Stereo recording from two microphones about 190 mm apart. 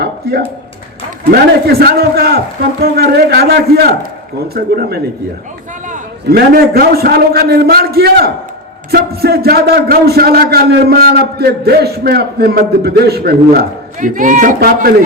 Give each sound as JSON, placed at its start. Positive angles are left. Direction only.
{"t": 0.0, "sound": "a sound", "side_deg": -55}
{"t": 1.3, "sound": "a man's voice", "side_deg": -55}
{"t": 5.9, "sound": "a man's voice", "side_deg": -55}